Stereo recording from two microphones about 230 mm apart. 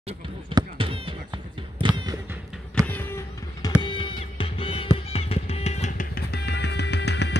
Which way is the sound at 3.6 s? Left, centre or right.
Left.